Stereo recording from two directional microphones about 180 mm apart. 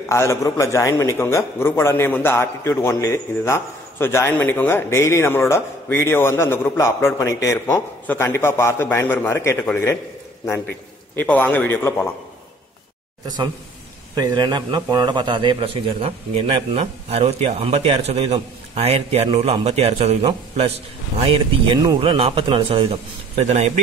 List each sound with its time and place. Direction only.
0.1 s a man's voice: 15° left (ahead or behind)
11.1 s a man's voice: 10° left (ahead or behind)
14.1 s a man's voice: 20° right (ahead or behind)